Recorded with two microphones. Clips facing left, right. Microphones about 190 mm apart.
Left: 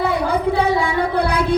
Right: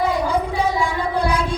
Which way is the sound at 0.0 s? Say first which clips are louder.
Left 2 dB; 65° left (ahead or behind).